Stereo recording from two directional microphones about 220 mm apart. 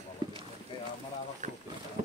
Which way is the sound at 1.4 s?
35° right (ahead or behind).